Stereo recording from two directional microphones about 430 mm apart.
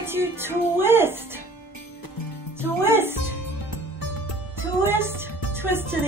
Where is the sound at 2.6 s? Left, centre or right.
Centre.